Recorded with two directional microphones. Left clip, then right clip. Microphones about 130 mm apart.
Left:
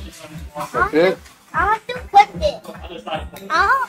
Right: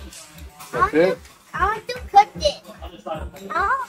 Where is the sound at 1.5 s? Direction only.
35° right (ahead or behind).